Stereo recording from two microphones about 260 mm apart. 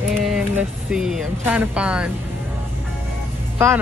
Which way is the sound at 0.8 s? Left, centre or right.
Centre.